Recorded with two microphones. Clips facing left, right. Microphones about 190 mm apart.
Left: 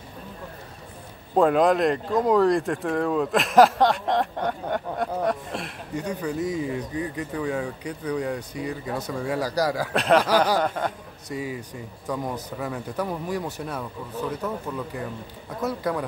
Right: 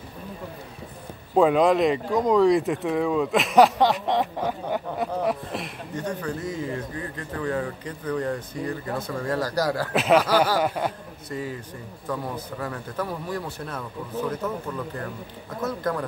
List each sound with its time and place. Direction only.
1.3 s speech: centre (ahead or behind)
5.9 s speech: 15° left (ahead or behind)
9.9 s speech: 5° right (ahead or behind)
11.3 s speech: 10° left (ahead or behind)
15.6 s speech: 10° left (ahead or behind)